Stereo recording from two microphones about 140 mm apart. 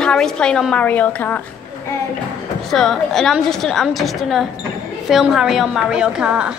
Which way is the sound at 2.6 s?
Centre (ahead or behind).